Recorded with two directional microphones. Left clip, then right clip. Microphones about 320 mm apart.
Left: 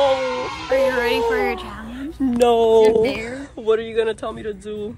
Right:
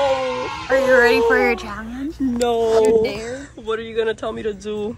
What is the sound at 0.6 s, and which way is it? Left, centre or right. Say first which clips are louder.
Speech: right 5 dB; centre.